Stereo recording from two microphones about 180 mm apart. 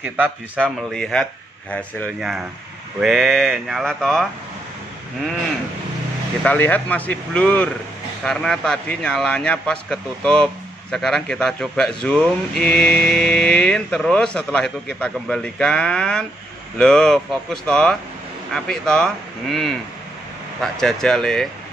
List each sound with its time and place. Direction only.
0.6 s mantra: 5° left (ahead or behind)
1.7 s speech: 5° left (ahead or behind)
3.0 s mantra: centre (ahead or behind)
6.4 s speech: 10° left (ahead or behind)
8.2 s mantra: 5° left (ahead or behind)